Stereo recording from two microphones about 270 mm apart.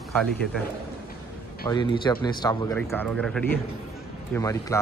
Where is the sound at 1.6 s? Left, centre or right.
Centre.